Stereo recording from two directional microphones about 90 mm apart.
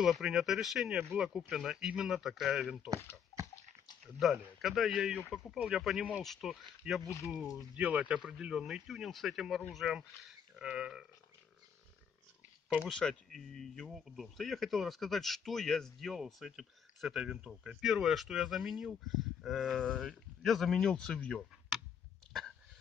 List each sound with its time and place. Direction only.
0.0 s speech: 5° right (ahead or behind)
3.3 s dog: 40° left (ahead or behind)
4.2 s speech: centre (ahead or behind)
12.6 s speech: 5° right (ahead or behind); by 21.5 s 15° left (ahead or behind)